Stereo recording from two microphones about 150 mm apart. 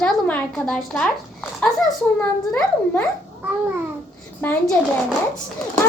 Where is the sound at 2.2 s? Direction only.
10° left (ahead or behind).